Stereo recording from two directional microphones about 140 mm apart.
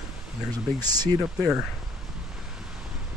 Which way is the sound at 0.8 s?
30° right (ahead or behind).